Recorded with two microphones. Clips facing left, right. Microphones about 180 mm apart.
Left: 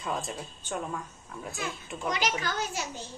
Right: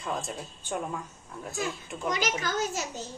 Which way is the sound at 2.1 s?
45° right (ahead or behind).